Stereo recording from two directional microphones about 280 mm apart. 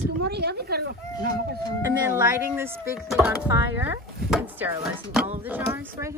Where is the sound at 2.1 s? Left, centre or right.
Centre.